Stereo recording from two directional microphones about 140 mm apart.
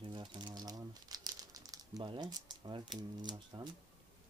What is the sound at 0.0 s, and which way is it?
Crumpling, 35° right (ahead or behind).